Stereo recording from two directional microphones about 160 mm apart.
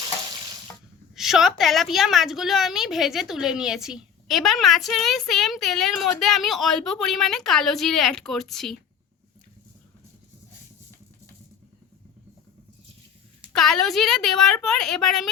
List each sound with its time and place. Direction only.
1.1 s a woman's voice: centre (ahead or behind)
13.5 s a woman's voice: centre (ahead or behind)